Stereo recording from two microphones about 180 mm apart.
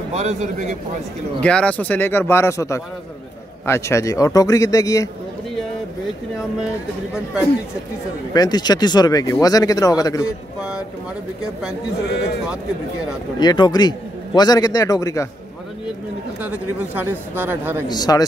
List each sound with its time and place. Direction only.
0.1 s a man's voice: 40° right (ahead or behind)
1.4 s a man's voice: 5° left (ahead or behind)
8.3 s speech: 20° left (ahead or behind)
10.2 s a man's voice: 5° right (ahead or behind)
12.1 s speech: 65° left (ahead or behind)
13.4 s speech: 25° left (ahead or behind)
16.3 s speech: 10° right (ahead or behind)
17.8 s speech: 20° left (ahead or behind)